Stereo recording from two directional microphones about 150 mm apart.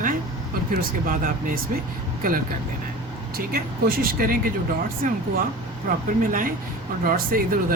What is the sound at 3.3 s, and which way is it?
Speech, 80° right.